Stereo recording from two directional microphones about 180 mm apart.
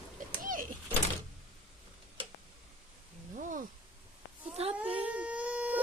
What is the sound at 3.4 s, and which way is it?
Speech, 45° right (ahead or behind).